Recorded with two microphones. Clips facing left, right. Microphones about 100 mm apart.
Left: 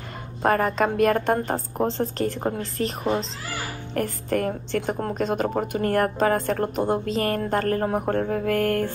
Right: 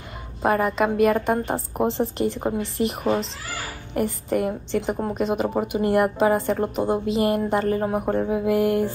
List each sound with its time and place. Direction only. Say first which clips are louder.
0.4 s a woman's voice: even; 5° right (ahead or behind)